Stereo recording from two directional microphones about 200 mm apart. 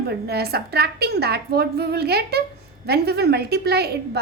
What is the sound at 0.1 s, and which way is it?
A woman's voice, 55° right (ahead or behind).